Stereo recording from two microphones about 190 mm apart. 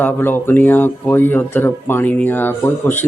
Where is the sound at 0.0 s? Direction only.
10° left (ahead or behind).